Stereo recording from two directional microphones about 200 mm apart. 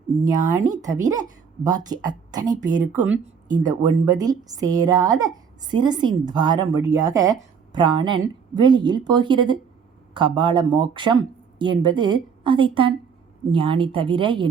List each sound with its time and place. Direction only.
0.3 s a woman's voice: 20° right (ahead or behind)